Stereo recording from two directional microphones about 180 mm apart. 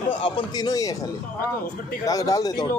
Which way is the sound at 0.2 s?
25° left (ahead or behind).